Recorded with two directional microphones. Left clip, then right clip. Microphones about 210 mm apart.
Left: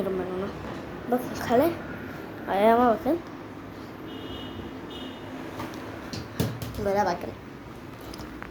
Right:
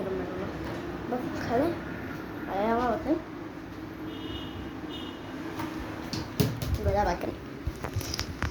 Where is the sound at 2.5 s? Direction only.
50° left (ahead or behind).